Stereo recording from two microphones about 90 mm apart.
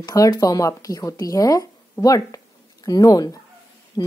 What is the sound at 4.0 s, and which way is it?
Speech, 60° left (ahead or behind).